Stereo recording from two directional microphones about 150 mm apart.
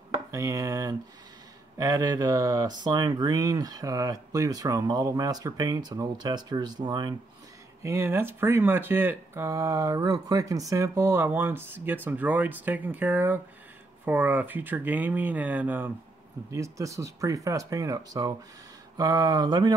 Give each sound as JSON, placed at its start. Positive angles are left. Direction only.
{"t": 0.3, "sound": "speech", "side_deg": -20}
{"t": 7.8, "sound": "speech", "side_deg": -15}